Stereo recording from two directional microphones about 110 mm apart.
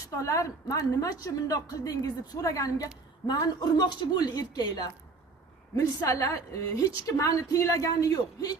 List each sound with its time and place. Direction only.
0.2 s a woman's voice: 30° left (ahead or behind)
6.0 s a woman's voice: 30° left (ahead or behind)